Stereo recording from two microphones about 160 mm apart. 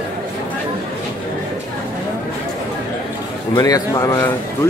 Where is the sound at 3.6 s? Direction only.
20° left (ahead or behind).